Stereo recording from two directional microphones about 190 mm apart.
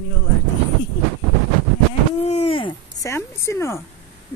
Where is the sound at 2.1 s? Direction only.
35° left (ahead or behind).